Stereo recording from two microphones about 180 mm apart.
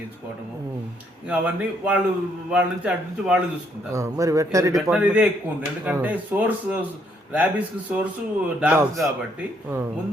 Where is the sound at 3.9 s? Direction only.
15° right (ahead or behind).